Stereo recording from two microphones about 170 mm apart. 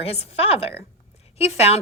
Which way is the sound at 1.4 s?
40° left (ahead or behind).